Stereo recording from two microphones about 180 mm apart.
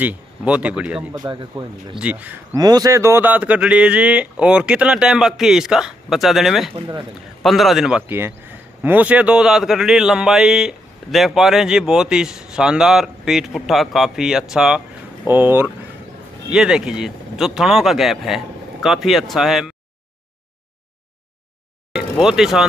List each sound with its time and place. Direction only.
0.0 s speech: 10° right (ahead or behind)
1.1 s speech: 25° right (ahead or behind)
2.0 s speech: 5° right (ahead or behind)
2.5 s a man's voice: 20° right (ahead or behind); by 6.7 s centre (ahead or behind)
6.7 s speech: 25° right (ahead or behind)
7.4 s a man's voice: centre (ahead or behind)
21.9 s a man's voice: centre (ahead or behind)